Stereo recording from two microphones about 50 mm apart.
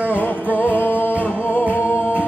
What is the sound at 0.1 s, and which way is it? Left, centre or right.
Music, left.